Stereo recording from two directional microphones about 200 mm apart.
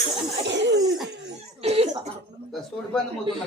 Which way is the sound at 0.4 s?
60° right (ahead or behind).